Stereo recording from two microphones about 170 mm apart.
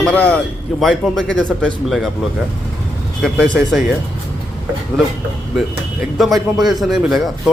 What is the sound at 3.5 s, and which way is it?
Speech, centre (ahead or behind).